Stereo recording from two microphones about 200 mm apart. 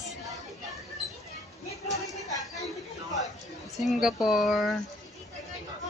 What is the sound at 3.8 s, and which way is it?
Speech, centre (ahead or behind).